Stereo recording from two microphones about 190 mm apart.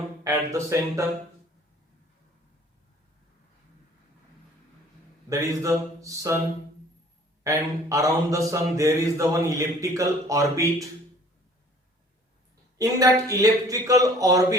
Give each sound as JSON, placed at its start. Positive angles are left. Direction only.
{"t": 0.3, "sound": "mantra", "side_deg": -15}
{"t": 5.3, "sound": "mantra", "side_deg": -15}
{"t": 7.4, "sound": "mantra", "side_deg": -15}
{"t": 12.8, "sound": "mantra", "side_deg": -20}